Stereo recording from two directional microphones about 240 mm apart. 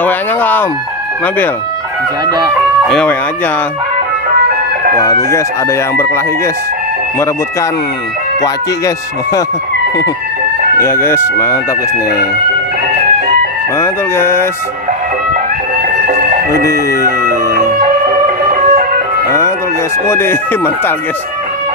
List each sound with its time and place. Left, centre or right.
0.0 s chicken: centre
2.2 s speech: centre
2.9 s speech: centre
4.9 s speech: centre
8.4 s speech: centre
10.8 s speech: centre
13.7 s speech: centre
16.1 s music: right
16.6 s speech: centre
17.3 s music: right
20.1 s speech: centre